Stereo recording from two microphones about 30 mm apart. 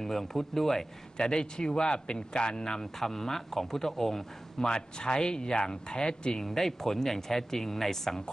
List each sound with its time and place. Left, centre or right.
0.0 s speech: centre
1.1 s speech: left
4.6 s speech: left
6.4 s speech: centre